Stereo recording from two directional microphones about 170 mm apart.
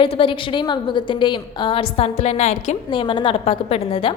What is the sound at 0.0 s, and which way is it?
A woman's voice, 30° left (ahead or behind).